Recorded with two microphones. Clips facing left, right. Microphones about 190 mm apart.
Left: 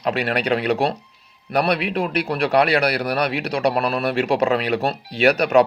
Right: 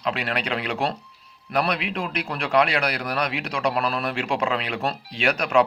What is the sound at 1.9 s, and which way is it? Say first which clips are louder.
Speech: left 6 dB; 40° left (ahead or behind).